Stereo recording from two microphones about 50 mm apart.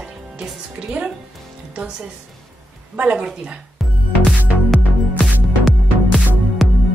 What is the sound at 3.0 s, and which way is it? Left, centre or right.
Speech, right.